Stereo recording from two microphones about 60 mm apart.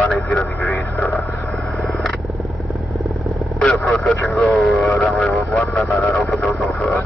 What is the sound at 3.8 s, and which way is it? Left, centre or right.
Speech, centre.